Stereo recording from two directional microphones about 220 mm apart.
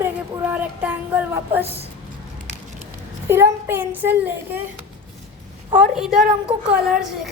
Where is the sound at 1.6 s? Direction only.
25° right (ahead or behind).